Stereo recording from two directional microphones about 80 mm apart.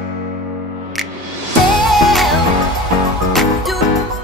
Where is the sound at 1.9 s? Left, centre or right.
Centre.